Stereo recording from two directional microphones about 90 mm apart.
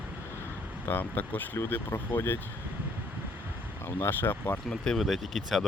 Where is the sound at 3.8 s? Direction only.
25° left (ahead or behind).